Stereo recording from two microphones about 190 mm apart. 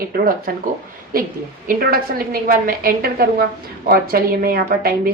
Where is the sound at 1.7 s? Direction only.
50° right (ahead or behind).